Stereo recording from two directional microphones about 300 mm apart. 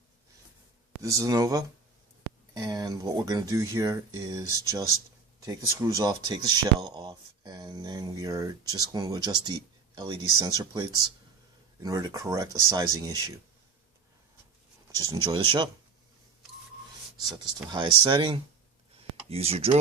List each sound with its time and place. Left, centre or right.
1.0 s speech: centre
14.9 s speech: centre
17.3 s speech: centre
18.9 s typing: centre